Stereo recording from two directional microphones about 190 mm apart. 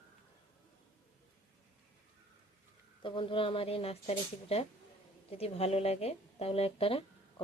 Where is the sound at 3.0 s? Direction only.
25° left (ahead or behind).